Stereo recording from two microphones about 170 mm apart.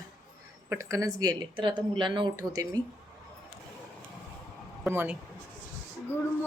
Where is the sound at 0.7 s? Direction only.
15° right (ahead or behind).